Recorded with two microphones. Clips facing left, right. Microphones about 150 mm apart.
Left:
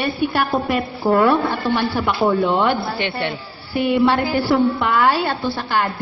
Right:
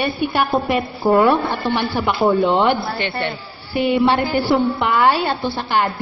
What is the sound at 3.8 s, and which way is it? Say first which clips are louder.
A woman's voice: even; 20° right (ahead or behind).